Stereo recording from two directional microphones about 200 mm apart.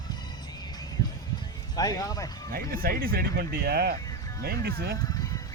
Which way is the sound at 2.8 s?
50° right (ahead or behind).